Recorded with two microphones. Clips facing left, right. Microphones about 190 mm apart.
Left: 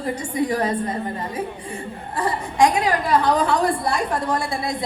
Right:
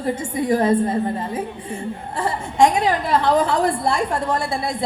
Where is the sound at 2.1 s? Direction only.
25° right (ahead or behind).